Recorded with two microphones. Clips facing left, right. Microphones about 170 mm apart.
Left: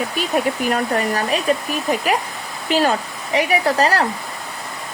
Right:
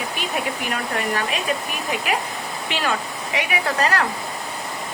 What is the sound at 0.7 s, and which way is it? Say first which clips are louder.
Speech: left 3 dB; 40° left (ahead or behind).